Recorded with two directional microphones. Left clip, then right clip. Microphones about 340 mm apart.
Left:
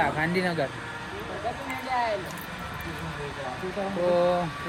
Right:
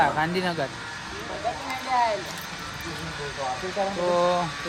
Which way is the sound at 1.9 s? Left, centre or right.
Centre.